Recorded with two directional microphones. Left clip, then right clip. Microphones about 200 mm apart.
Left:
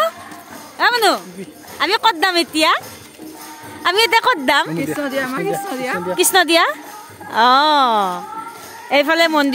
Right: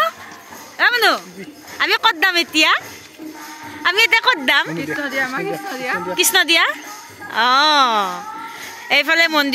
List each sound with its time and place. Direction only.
0.7 s speech: 10° left (ahead or behind)
3.8 s a woman's voice: 20° left (ahead or behind)
4.7 s a woman's voice: 60° left (ahead or behind)
6.1 s a woman's voice: 20° left (ahead or behind)